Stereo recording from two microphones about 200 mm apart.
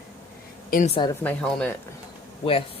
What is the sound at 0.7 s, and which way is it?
Speech, 45° left (ahead or behind).